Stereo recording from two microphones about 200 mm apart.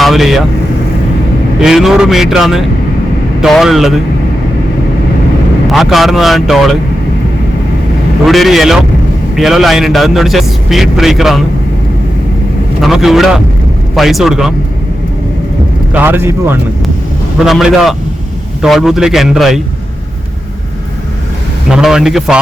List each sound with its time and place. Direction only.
0.0 s speech: centre (ahead or behind)
1.6 s a man's voice: centre (ahead or behind)
5.6 s a man's voice: centre (ahead or behind)
8.3 s a man's voice: centre (ahead or behind)
12.8 s a man's voice: centre (ahead or behind)
15.9 s a man's voice: 10° right (ahead or behind)
21.7 s a man's voice: 5° right (ahead or behind)